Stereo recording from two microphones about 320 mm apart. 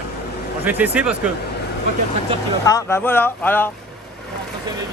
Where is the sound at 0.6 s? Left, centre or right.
Centre.